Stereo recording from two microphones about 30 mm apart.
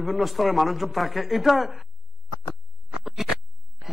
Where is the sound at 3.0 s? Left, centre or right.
Centre.